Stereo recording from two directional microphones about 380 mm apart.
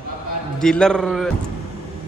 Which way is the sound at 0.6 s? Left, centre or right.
Centre.